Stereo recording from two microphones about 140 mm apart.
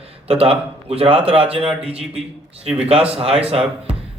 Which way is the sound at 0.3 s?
45° right (ahead or behind).